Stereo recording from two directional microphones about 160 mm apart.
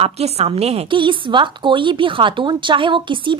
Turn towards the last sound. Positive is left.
turn(degrees=-30)  # may be behind; listen again after turning